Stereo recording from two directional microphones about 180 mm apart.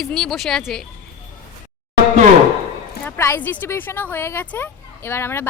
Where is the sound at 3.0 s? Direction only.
10° left (ahead or behind).